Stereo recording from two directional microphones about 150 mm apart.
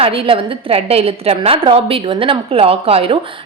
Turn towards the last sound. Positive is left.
turn(degrees=-40)  # may be behind; listen again after turning